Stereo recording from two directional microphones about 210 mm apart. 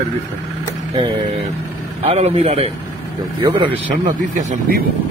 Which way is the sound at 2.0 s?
30° right (ahead or behind).